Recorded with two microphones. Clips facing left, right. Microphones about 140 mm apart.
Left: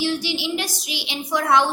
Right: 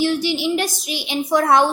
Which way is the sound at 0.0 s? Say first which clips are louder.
Right 5 dB; 50° right (ahead or behind).